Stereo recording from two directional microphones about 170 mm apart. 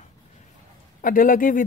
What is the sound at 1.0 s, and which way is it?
Speech, 55° left (ahead or behind).